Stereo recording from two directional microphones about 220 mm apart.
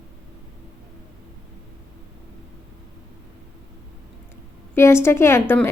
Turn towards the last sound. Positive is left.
turn(degrees=10)  # may be behind; listen again after turning